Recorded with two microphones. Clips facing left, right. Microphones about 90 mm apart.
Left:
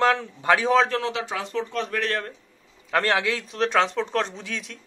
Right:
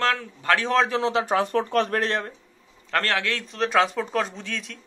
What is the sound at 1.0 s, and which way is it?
Speech, 30° right (ahead or behind).